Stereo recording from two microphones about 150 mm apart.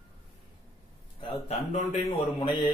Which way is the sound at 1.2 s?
45° left (ahead or behind).